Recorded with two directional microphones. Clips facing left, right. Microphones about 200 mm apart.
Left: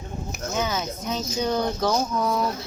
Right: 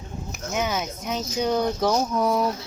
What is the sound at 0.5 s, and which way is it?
Speech, 15° right (ahead or behind).